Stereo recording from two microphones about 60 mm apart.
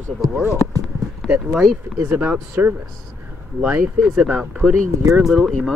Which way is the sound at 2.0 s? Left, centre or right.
Right.